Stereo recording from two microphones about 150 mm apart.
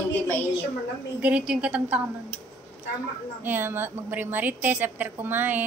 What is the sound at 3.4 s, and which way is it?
A woman's voice, 15° right (ahead or behind).